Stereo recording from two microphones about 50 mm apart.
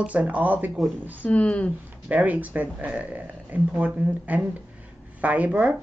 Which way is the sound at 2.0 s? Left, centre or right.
Right.